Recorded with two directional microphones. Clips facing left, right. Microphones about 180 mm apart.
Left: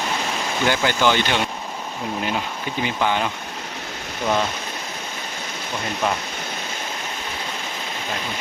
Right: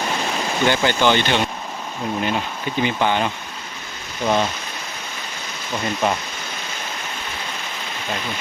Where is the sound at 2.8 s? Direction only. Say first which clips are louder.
Right 2 dB; 5° left (ahead or behind).